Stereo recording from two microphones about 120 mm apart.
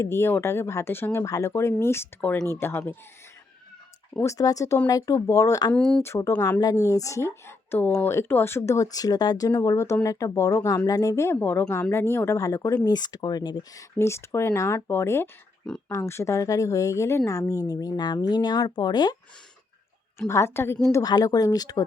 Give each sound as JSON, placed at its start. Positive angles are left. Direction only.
{"t": 0.0, "sound": "speech", "side_deg": 20}
{"t": 4.2, "sound": "speech", "side_deg": 25}
{"t": 5.7, "sound": "speech", "side_deg": 5}
{"t": 6.0, "sound": "speech", "side_deg": 25}
{"t": 20.1, "sound": "speech", "side_deg": 20}